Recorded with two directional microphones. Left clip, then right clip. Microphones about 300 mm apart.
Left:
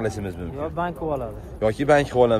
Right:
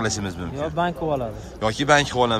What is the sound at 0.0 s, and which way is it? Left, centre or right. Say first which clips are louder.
Speech: right 2 dB; centre.